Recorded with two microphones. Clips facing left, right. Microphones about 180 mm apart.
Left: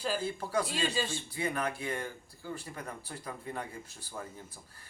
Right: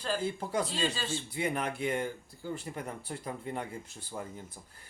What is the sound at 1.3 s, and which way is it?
Speech, 25° right (ahead or behind).